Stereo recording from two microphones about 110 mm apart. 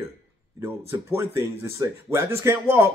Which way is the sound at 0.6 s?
25° right (ahead or behind).